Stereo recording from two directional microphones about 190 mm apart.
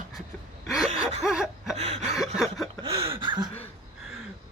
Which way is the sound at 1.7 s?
35° right (ahead or behind).